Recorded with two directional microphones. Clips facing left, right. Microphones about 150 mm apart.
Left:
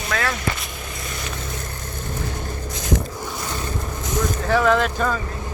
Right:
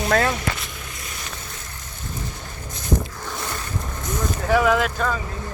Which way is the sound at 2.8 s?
90° left.